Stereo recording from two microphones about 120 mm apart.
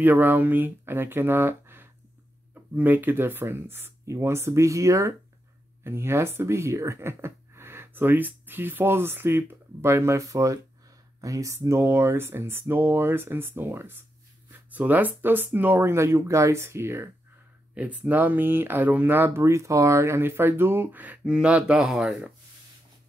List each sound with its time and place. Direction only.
0.0 s speech: 15° right (ahead or behind)